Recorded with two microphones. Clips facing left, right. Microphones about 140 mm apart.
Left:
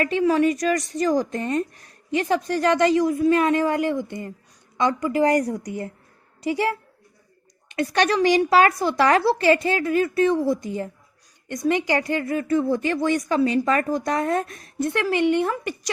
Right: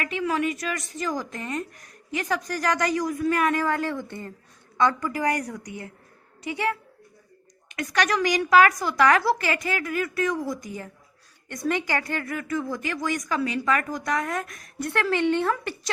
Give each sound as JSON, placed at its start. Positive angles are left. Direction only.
{"t": 0.0, "sound": "a woman's voice", "side_deg": 35}